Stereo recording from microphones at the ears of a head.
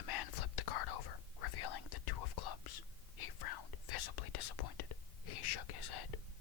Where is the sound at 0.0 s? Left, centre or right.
Left.